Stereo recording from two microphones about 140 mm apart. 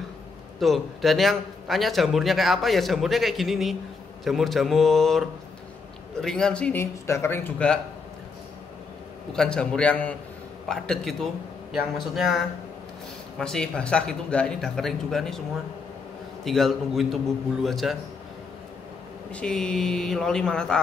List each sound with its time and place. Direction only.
0.6 s a man's voice: centre (ahead or behind)
6.2 s speech: 5° left (ahead or behind)
6.8 s speech: 20° left (ahead or behind)
9.3 s a man's voice: 5° left (ahead or behind)
13.4 s a man's voice: 5° left (ahead or behind)
16.4 s a man's voice: centre (ahead or behind)
19.3 s a man's voice: 5° left (ahead or behind)